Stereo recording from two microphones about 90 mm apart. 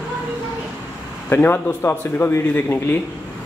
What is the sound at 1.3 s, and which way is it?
Speech, 25° left (ahead or behind).